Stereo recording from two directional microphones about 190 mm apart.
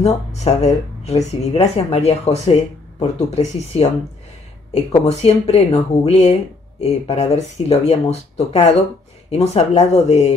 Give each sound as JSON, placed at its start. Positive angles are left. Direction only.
{"t": 0.0, "sound": "speech", "side_deg": 35}